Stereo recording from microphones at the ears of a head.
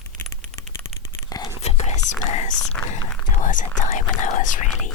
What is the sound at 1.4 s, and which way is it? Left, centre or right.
Speech, left.